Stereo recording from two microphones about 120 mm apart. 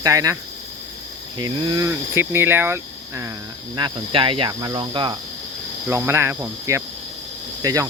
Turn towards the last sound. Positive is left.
turn(degrees=-30)  # may be behind; listen again after turning